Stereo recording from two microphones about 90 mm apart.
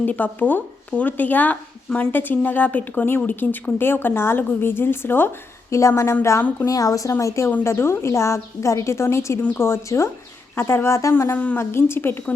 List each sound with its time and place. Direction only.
0.0 s a woman's voice: 20° left (ahead or behind)